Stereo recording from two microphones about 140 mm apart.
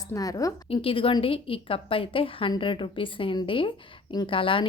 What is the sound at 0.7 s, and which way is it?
A woman's voice, 40° left (ahead or behind).